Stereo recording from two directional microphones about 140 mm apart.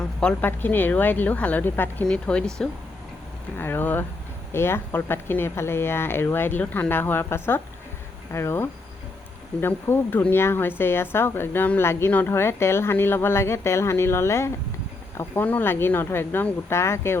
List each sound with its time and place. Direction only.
0.2 s speech: 10° left (ahead or behind)
3.6 s speech: 15° left (ahead or behind)